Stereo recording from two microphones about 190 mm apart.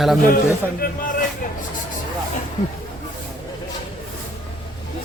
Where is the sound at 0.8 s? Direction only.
50° left (ahead or behind).